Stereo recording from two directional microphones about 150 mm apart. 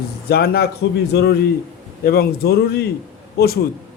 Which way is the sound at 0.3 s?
90° left.